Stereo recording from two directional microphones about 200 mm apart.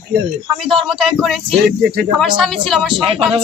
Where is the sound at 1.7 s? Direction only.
55° right (ahead or behind).